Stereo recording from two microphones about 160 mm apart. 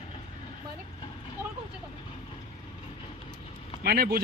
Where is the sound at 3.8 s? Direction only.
80° right.